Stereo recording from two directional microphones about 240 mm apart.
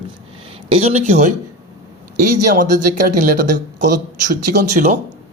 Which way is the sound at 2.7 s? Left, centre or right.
Right.